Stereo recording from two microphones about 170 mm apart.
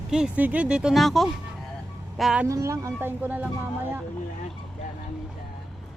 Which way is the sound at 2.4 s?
15° right (ahead or behind).